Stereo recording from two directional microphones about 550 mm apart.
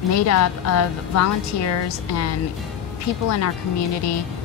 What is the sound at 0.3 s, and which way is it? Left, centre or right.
A woman's voice, left.